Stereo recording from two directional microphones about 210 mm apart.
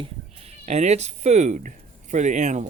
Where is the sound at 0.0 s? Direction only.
30° right (ahead or behind).